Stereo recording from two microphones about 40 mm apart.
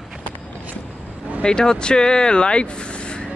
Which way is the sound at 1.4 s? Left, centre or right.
Centre.